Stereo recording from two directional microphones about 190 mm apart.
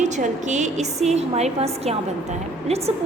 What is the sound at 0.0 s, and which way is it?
A woman's voice, 40° right (ahead or behind).